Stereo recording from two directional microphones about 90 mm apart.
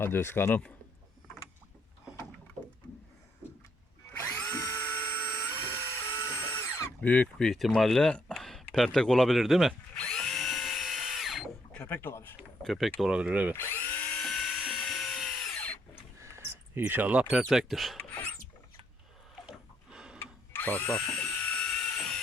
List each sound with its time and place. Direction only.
0.0 s speech: 25° left (ahead or behind)
4.2 s drill: 25° left (ahead or behind)
7.0 s speech: 15° left (ahead or behind); by 9.7 s 5° right (ahead or behind)
9.9 s drill: 10° left (ahead or behind)
11.7 s speech: 15° left (ahead or behind)
12.6 s speech: centre (ahead or behind); by 13.6 s 15° right (ahead or behind)
13.6 s drill: 20° left (ahead or behind)
14.2 s dental drill: 5° left (ahead or behind)
14.8 s drill: 5° left (ahead or behind)
16.1 s cricket: 30° right (ahead or behind)
17.4 s speech: 5° right (ahead or behind)
19.5 s a sound: 10° right (ahead or behind)
20.1 s drill: 20° left (ahead or behind)